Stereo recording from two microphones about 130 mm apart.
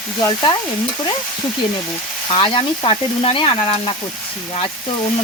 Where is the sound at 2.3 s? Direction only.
40° left (ahead or behind).